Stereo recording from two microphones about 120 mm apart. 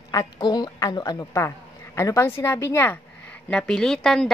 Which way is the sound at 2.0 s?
25° left (ahead or behind).